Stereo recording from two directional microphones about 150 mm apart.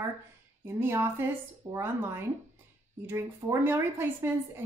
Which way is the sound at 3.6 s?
15° right (ahead or behind).